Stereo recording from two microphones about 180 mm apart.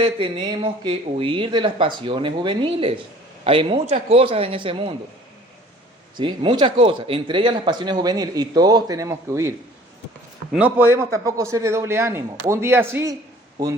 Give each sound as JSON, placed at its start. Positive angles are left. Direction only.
{"t": 0.0, "sound": "speech", "side_deg": -25}
{"t": 6.1, "sound": "speech", "side_deg": -25}
{"t": 10.5, "sound": "a man's voice", "side_deg": -10}